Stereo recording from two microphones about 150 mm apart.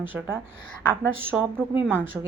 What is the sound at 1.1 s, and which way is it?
Speech, 15° right (ahead or behind).